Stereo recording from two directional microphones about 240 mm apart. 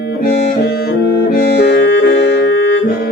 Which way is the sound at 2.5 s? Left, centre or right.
Left.